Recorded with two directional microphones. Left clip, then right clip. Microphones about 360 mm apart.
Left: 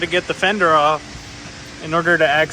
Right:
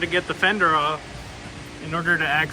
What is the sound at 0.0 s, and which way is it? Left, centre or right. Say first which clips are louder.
Speech: left 3 dB; centre.